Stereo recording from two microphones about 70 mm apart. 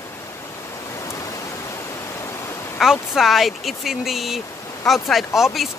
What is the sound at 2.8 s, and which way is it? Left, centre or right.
Speech, centre.